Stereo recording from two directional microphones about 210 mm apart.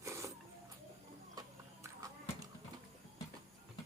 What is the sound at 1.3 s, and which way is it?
Clip-clop, 15° right (ahead or behind).